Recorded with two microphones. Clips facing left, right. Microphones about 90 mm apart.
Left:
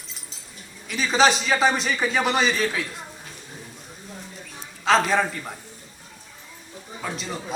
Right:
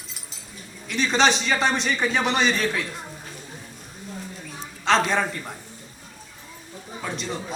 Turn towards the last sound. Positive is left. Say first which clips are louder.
# right 1 dB
turn(degrees=0)  # may be behind; listen again after turning